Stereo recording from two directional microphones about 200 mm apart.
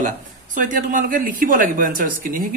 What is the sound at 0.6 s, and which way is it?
Speech, 40° right (ahead or behind).